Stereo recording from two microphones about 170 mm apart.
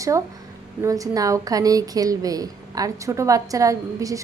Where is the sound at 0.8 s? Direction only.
20° right (ahead or behind).